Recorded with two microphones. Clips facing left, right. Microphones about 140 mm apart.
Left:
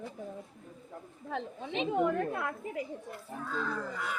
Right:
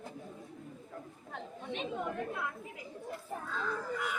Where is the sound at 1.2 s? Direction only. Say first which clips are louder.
Left 6 dB; 90° left; by 2.8 s 60° left (ahead or behind).